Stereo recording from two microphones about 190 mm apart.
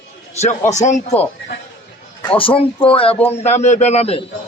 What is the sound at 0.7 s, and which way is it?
A man's voice, 40° left (ahead or behind).